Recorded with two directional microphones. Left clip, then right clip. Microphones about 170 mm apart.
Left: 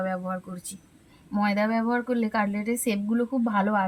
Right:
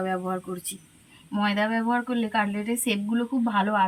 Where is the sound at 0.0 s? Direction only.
35° left (ahead or behind).